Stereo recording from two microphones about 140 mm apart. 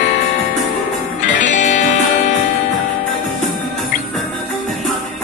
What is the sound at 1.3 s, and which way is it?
Music, 65° left (ahead or behind).